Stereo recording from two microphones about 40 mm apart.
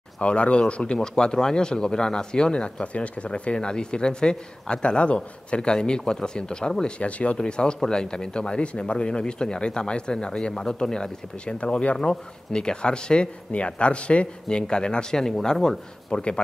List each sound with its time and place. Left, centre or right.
0.2 s speech: left
7.0 s speech: left
7.3 s speech: left